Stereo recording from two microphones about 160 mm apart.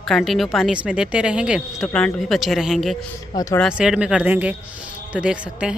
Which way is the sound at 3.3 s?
20° left (ahead or behind).